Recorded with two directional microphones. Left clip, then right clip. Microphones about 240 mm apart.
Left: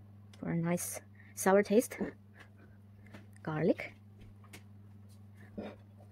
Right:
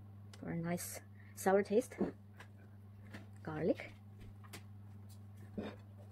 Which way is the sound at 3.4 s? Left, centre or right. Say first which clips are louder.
Left 5 dB; left.